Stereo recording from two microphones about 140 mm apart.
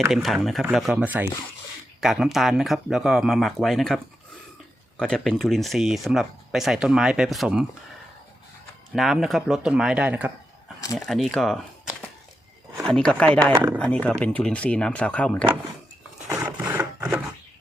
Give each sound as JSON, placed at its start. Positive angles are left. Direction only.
{"t": 0.1, "sound": "speech", "side_deg": 0}
{"t": 8.9, "sound": "speech", "side_deg": -5}
{"t": 10.9, "sound": "speech", "side_deg": 0}
{"t": 12.8, "sound": "speech", "side_deg": 5}
{"t": 13.5, "sound": "speech", "side_deg": -30}
{"t": 13.7, "sound": "speech", "side_deg": 10}
{"t": 16.3, "sound": "a sound", "side_deg": -10}
{"t": 16.6, "sound": "wood", "side_deg": -20}